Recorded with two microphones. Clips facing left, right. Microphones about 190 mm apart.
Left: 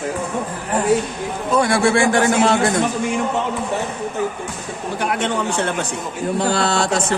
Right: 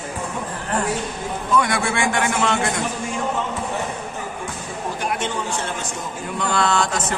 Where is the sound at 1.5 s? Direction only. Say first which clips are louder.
Left 6 dB; 30° left (ahead or behind).